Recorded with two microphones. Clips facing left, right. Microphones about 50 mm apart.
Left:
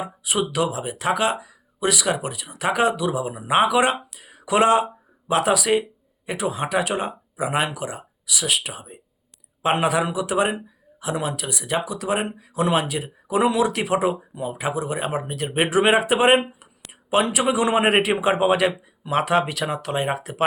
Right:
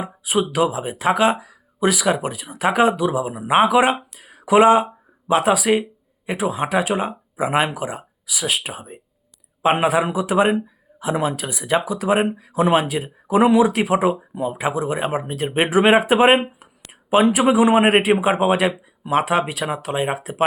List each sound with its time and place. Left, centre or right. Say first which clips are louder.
0.0 s speech: right 3 dB; right